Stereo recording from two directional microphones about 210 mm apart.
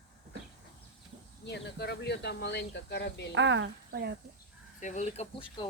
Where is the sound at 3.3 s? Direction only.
60° right (ahead or behind).